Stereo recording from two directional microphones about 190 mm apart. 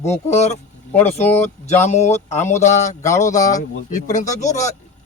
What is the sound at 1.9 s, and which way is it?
Speech, 35° left (ahead or behind).